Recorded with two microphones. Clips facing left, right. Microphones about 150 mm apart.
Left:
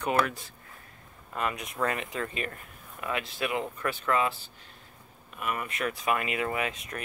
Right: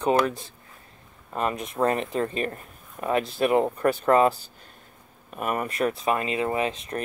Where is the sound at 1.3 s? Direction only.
35° right (ahead or behind).